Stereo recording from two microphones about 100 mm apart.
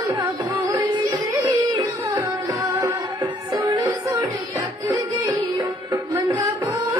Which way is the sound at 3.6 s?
45° right (ahead or behind).